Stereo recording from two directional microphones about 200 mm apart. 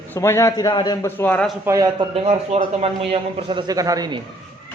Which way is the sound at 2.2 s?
30° right (ahead or behind).